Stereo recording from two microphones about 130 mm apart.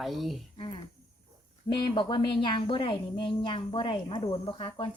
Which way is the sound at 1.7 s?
35° left (ahead or behind).